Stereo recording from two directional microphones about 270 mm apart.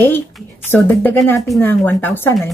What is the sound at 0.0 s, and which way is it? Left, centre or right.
Speech, centre.